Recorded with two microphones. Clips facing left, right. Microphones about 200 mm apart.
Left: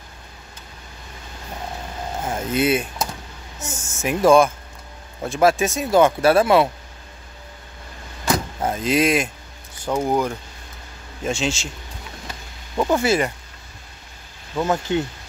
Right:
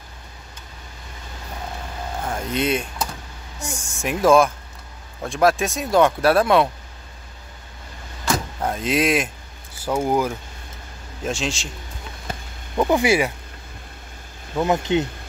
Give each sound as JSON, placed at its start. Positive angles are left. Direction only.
{"t": 2.2, "sound": "speech", "side_deg": 5}
{"t": 8.5, "sound": "speech", "side_deg": 0}
{"t": 12.7, "sound": "speech", "side_deg": -15}
{"t": 14.6, "sound": "speech", "side_deg": -20}